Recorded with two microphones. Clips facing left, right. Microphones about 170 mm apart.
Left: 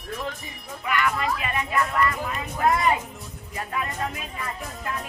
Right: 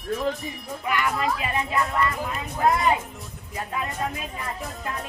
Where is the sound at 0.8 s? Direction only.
25° right (ahead or behind).